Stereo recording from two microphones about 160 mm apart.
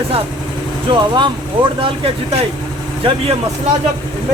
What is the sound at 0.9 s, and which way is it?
Speech, 30° right (ahead or behind).